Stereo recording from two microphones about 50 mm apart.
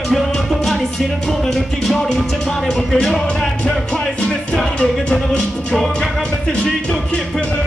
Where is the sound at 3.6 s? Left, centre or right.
Left.